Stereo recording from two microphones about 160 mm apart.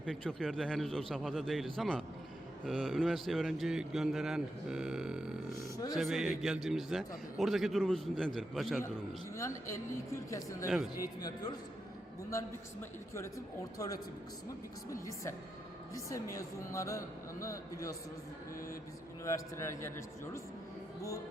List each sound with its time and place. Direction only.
0.0 s a man's voice: 5° left (ahead or behind)
9.3 s speech: 20° left (ahead or behind)
15.0 s speech: 20° left (ahead or behind)
19.2 s speech: 15° left (ahead or behind)